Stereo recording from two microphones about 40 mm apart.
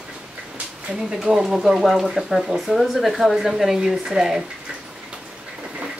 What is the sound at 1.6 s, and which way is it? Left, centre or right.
Speech, centre.